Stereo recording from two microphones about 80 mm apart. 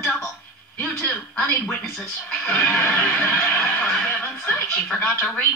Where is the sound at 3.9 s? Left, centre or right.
Centre.